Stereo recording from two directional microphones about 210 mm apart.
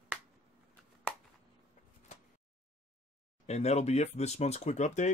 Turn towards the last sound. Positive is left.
turn(degrees=35)  # may be behind; listen again after turning